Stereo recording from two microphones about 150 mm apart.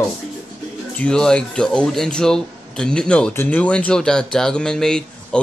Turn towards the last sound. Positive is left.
turn(degrees=5)  # may be behind; listen again after turning